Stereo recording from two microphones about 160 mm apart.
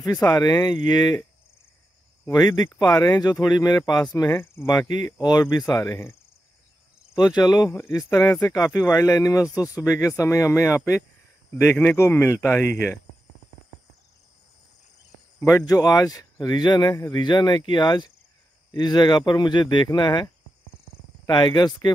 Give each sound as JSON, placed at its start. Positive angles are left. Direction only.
{"t": 0.0, "sound": "speech", "side_deg": 20}
{"t": 2.2, "sound": "speech", "side_deg": 20}
{"t": 7.2, "sound": "speech", "side_deg": 25}
{"t": 15.4, "sound": "speech", "side_deg": 20}
{"t": 21.3, "sound": "speech", "side_deg": 25}